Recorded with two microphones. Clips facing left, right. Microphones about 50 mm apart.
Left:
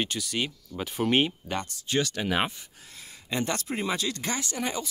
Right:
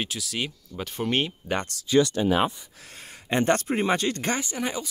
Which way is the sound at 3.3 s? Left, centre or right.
Right.